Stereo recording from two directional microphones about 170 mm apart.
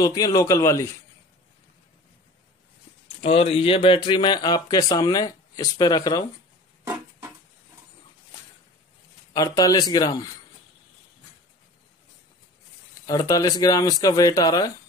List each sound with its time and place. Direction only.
0.0 s speech: 20° left (ahead or behind)
3.2 s speech: 35° left (ahead or behind)
9.3 s speech: 20° left (ahead or behind)
13.0 s speech: 25° left (ahead or behind)